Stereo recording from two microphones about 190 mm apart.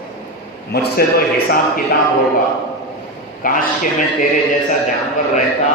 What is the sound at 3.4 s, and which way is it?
Speech, 45° left (ahead or behind).